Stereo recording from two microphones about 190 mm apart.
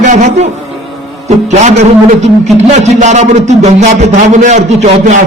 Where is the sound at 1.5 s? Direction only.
35° right (ahead or behind).